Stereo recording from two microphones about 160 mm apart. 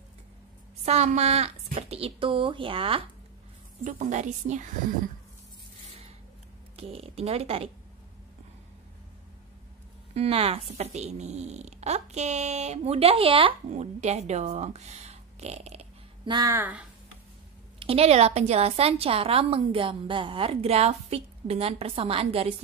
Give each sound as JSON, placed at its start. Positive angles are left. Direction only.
{"t": 0.8, "sound": "a woman's voice", "side_deg": -45}
{"t": 3.8, "sound": "speech", "side_deg": -50}
{"t": 6.8, "sound": "a woman's voice", "side_deg": -40}
{"t": 10.1, "sound": "speech", "side_deg": -40}
{"t": 16.3, "sound": "speech", "side_deg": -25}
{"t": 17.7, "sound": "a woman's voice", "side_deg": -35}